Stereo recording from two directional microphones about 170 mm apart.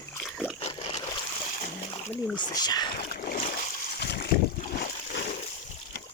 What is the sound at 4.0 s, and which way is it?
Boat, 75° left (ahead or behind).